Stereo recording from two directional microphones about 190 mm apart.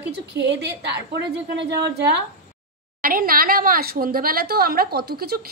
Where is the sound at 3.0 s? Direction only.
50° right (ahead or behind).